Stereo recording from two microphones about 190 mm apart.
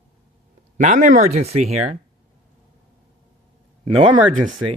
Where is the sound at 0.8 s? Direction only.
40° right (ahead or behind).